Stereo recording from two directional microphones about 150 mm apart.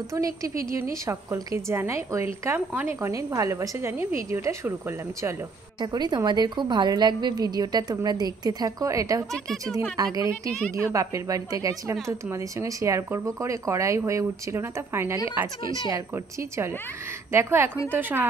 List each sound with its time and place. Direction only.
0.1 s speech: 20° right (ahead or behind)
5.8 s speech: 30° right (ahead or behind)
9.3 s speech: centre (ahead or behind)
9.9 s speech: 25° right (ahead or behind)